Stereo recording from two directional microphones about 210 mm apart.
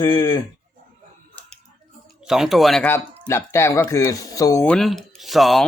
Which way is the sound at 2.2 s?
Centre (ahead or behind).